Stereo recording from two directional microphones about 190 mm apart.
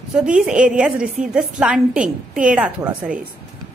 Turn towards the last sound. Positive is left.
turn(degrees=-5)  # may be behind; listen again after turning